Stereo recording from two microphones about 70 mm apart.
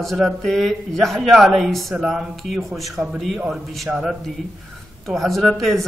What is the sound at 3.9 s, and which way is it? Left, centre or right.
Speech, centre.